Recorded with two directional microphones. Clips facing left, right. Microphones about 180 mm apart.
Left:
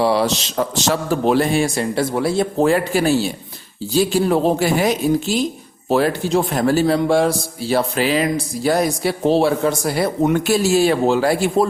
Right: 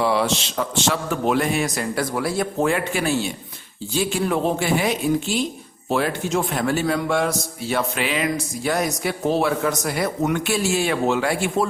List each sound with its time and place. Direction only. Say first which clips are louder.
0.0 s a man's voice: left 3 dB; 35° left (ahead or behind)